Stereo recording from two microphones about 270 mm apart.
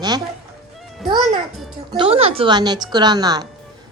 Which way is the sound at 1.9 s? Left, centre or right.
Centre.